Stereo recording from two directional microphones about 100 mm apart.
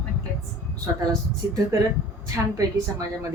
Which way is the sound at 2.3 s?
35° right (ahead or behind).